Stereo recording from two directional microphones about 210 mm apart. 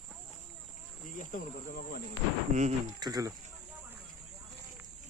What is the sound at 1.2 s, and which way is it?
Speech, 40° left (ahead or behind).